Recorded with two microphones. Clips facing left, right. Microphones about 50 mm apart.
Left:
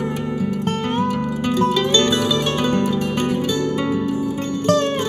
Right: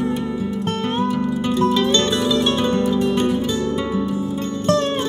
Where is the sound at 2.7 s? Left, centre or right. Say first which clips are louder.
Right 1 dB; left.